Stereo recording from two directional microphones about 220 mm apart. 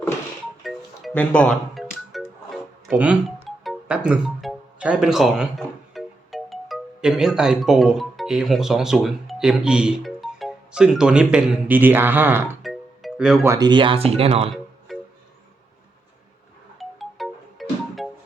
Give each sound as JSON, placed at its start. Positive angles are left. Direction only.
{"t": 0.6, "sound": "music", "side_deg": 0}
{"t": 3.6, "sound": "speech", "side_deg": -5}
{"t": 12.6, "sound": "music", "side_deg": 0}
{"t": 13.5, "sound": "speech", "side_deg": -20}
{"t": 14.9, "sound": "music", "side_deg": 0}
{"t": 16.7, "sound": "music", "side_deg": 0}